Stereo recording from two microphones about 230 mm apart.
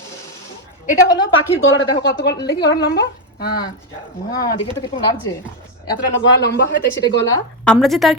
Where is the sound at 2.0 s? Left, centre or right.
Left.